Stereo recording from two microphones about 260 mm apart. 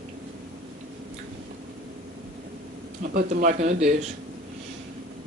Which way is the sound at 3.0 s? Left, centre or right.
Right.